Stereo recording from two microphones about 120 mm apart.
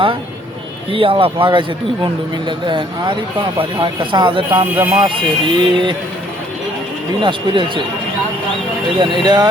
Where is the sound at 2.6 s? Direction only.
40° right (ahead or behind).